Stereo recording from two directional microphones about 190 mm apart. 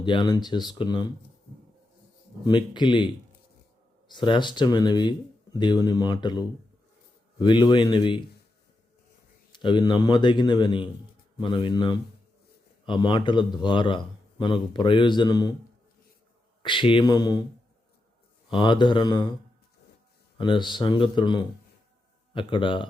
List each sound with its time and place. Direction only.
0.0 s a man's voice: 25° left (ahead or behind)
2.4 s a man's voice: 25° left (ahead or behind)
4.1 s a man's voice: 25° left (ahead or behind)
9.5 s a man's voice: 25° left (ahead or behind)
16.6 s a man's voice: 25° left (ahead or behind)
18.5 s a man's voice: 25° left (ahead or behind)
20.4 s a man's voice: 25° left (ahead or behind)